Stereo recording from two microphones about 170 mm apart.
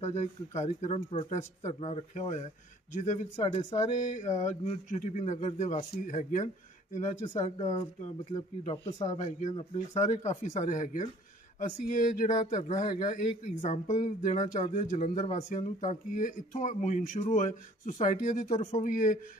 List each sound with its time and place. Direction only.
0.0 s speech: 40° left (ahead or behind)
7.4 s speech: 35° left (ahead or behind)
9.1 s speech: 45° left (ahead or behind)
10.1 s speech: 35° left (ahead or behind); by 19.1 s 50° left (ahead or behind)